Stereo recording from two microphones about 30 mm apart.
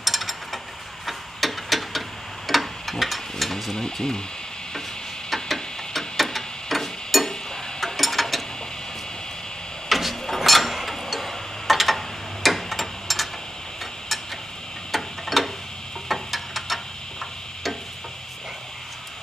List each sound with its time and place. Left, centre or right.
0.0 s ratchet: centre
1.0 s tick-tock: centre
3.7 s speech: left
5.3 s a sound: centre
7.8 s gears: centre
9.8 s a sound: centre
12.4 s tick-tock: centre
14.9 s tick-tock: centre
16.1 s a sound: centre